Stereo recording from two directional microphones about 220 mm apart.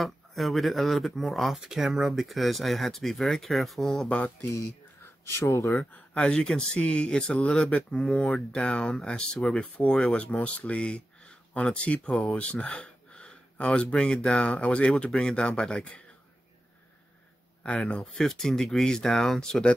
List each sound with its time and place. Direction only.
0.0 s speech: centre (ahead or behind)
17.6 s speech: 5° left (ahead or behind)